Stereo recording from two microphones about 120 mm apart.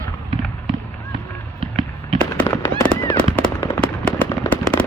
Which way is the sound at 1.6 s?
45° right (ahead or behind).